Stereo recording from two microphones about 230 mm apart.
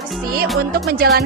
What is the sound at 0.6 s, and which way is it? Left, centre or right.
Music, right.